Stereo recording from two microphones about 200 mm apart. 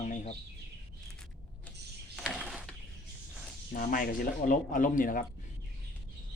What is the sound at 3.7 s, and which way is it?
Speech, 45° left (ahead or behind).